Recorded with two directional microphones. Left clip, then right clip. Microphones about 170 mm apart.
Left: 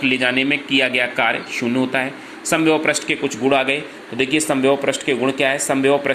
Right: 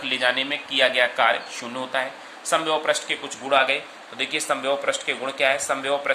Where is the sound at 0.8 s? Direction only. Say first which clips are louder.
Right 1 dB; 20° left (ahead or behind).